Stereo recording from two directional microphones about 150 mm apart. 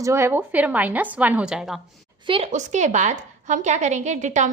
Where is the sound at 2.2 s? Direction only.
40° right (ahead or behind).